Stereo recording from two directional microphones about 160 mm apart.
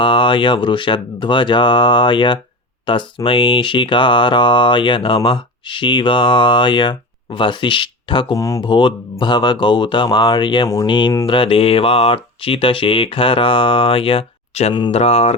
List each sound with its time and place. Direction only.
0.0 s mantra: 30° left (ahead or behind)
8.4 s speech: 20° left (ahead or behind)
11.3 s mantra: 35° left (ahead or behind)
14.7 s speech: 30° left (ahead or behind)
14.9 s mantra: 40° left (ahead or behind)